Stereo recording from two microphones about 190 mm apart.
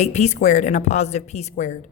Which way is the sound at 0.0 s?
35° left (ahead or behind).